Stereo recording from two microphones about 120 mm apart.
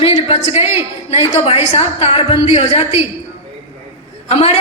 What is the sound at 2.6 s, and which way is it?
Speech, 60° left (ahead or behind).